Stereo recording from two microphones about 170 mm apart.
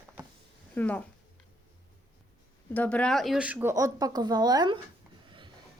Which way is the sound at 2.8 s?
5° left (ahead or behind).